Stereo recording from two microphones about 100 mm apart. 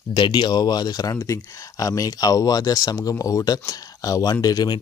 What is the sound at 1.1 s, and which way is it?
Speech, 30° left (ahead or behind).